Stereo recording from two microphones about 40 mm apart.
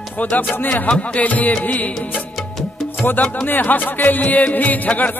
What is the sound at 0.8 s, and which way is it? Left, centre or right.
Music, left.